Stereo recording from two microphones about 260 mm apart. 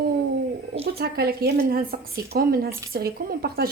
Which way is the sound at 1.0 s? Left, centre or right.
Right.